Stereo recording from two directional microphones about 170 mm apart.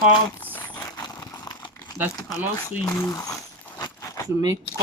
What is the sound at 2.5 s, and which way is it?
Speech, 15° left (ahead or behind).